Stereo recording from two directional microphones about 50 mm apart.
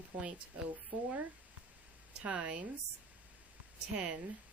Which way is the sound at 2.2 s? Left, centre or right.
Right.